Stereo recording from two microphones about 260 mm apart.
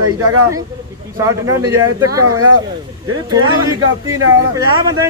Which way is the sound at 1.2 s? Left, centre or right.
Centre.